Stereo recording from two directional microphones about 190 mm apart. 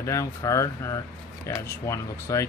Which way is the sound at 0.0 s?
15° left (ahead or behind).